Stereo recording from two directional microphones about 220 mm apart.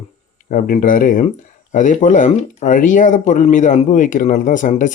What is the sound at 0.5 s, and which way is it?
Speech, 35° left (ahead or behind).